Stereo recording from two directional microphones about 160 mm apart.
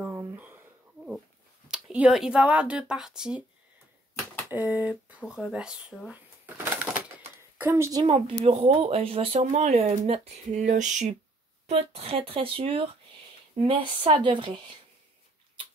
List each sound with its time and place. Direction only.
0.0 s a sound: 20° right (ahead or behind)
1.7 s speech: 5° right (ahead or behind)
4.5 s speech: 10° right (ahead or behind)
6.0 s a sound: 10° right (ahead or behind)
7.5 s a woman's voice: 15° right (ahead or behind)
8.5 s speech: 40° right (ahead or behind)